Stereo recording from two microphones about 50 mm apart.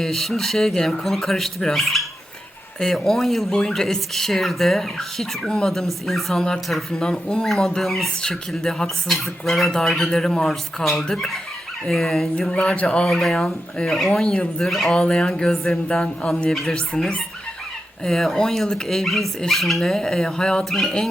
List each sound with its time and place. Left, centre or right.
0.0 s speech: centre
5.7 s speech: centre
6.9 s speech: centre
7.4 s speech: centre
8.2 s speech: centre
9.0 s speech: centre
12.5 s speech: left
13.1 s speech: centre
14.8 s speech: centre
20.7 s speech: centre